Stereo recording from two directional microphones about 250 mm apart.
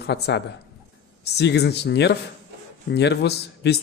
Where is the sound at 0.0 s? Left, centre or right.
Left.